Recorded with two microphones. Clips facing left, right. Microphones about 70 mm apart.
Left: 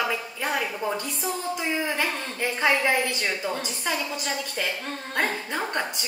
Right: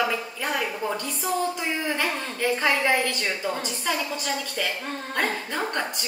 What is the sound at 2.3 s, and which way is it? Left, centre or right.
A woman's voice, centre.